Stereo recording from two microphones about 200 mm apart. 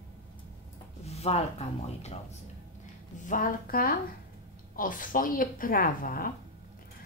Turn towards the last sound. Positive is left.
turn(degrees=45)  # may be behind; listen again after turning